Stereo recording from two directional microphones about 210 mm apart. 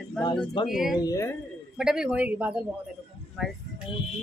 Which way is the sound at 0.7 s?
Centre (ahead or behind).